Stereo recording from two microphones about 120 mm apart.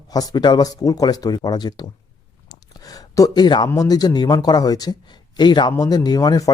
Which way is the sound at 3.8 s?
35° left (ahead or behind).